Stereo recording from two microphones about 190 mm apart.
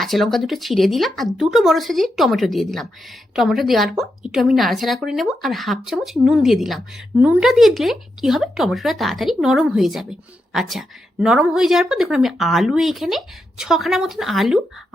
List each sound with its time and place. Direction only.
0.0 s a woman's voice: centre (ahead or behind)